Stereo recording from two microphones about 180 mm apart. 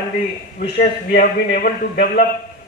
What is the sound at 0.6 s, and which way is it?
A man's voice, 55° left (ahead or behind).